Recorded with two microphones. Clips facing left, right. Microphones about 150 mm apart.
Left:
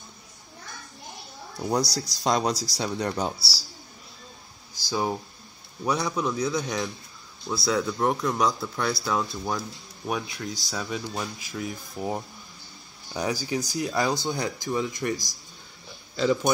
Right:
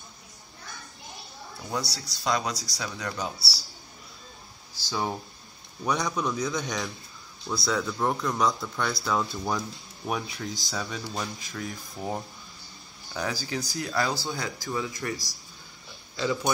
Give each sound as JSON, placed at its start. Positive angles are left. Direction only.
{"t": 1.7, "sound": "speech", "side_deg": 40}
{"t": 4.7, "sound": "a sound", "side_deg": 10}
{"t": 5.9, "sound": "a man's voice", "side_deg": 5}